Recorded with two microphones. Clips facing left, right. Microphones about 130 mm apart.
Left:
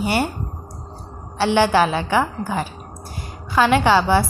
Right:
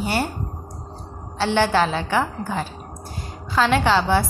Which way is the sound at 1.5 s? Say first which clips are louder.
Left 3 dB; 10° left (ahead or behind).